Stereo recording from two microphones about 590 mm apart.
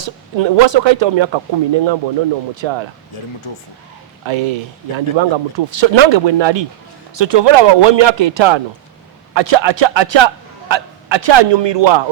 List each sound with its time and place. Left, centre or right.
0.0 s speech: right
3.5 s speech: left
4.3 s a man's voice: right